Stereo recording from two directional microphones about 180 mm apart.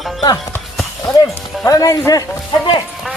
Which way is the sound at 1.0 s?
15° left (ahead or behind).